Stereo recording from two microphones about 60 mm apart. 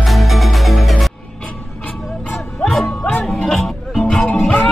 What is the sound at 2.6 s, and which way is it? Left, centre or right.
Music, centre.